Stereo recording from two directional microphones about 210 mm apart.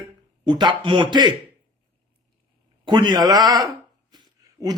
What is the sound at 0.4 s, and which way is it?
Speech, 20° right (ahead or behind).